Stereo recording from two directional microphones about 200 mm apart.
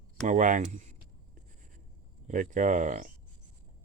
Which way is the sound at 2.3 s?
40° right (ahead or behind).